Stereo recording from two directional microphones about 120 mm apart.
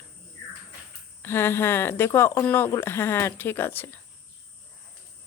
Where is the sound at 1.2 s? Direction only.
20° left (ahead or behind).